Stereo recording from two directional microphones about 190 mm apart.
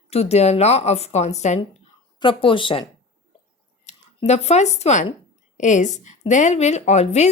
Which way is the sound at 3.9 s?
35° left (ahead or behind).